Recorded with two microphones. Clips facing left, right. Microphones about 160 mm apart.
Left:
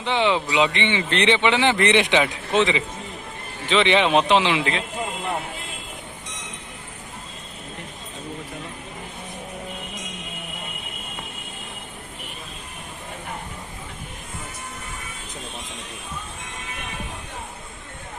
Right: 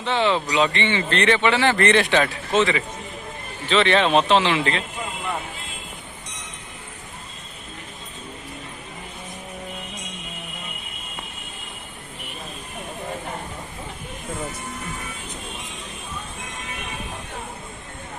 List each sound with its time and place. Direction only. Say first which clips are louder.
0.0 s a man's voice: even; 15° left (ahead or behind)